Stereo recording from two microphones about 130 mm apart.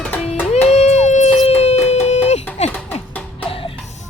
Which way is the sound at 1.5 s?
55° left (ahead or behind).